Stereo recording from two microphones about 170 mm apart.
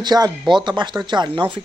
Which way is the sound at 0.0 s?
25° right (ahead or behind).